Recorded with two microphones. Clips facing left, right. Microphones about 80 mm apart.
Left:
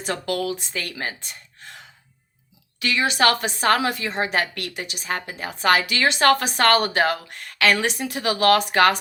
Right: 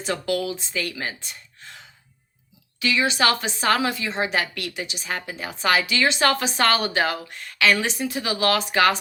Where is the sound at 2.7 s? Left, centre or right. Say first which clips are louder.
Left 1 dB; left.